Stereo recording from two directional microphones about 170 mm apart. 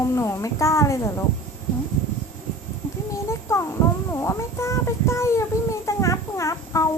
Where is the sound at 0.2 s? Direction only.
15° left (ahead or behind).